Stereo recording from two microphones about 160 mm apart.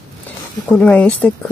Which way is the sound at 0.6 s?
5° left (ahead or behind).